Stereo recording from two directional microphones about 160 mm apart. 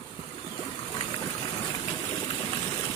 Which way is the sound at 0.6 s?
30° left (ahead or behind).